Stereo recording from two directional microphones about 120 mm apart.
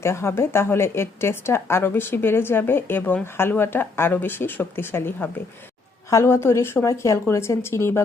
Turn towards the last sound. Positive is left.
turn(degrees=20)  # may be behind; listen again after turning